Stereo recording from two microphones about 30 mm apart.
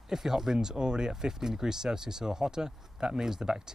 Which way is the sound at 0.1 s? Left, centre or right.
Centre.